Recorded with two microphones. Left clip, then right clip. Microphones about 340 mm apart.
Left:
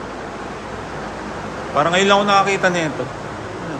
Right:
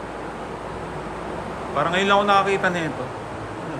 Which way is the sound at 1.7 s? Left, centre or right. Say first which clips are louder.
Left 4 dB; centre.